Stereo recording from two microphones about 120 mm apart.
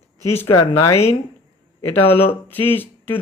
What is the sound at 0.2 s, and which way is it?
Speech, 25° left (ahead or behind).